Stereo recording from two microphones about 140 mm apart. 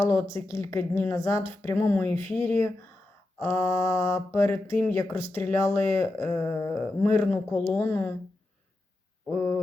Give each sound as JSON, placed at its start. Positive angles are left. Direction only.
{"t": 0.0, "sound": "mantra", "side_deg": 20}
{"t": 0.3, "sound": "speech", "side_deg": 20}
{"t": 3.3, "sound": "mantra", "side_deg": 20}
{"t": 4.7, "sound": "speech", "side_deg": 15}